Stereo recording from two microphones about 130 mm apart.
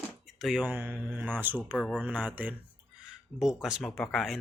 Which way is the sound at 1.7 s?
10° left (ahead or behind).